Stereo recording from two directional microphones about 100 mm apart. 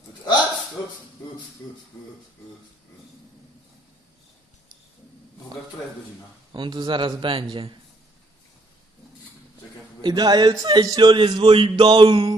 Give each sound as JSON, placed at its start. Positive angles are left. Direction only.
{"t": 6.5, "sound": "a man's voice", "side_deg": -50}
{"t": 10.0, "sound": "a man's voice", "side_deg": -45}
{"t": 11.8, "sound": "music", "side_deg": -60}